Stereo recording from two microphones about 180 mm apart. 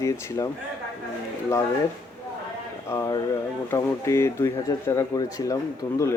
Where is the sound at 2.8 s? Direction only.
15° left (ahead or behind).